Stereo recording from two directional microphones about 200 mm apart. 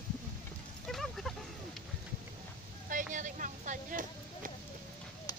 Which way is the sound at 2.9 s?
40° right (ahead or behind).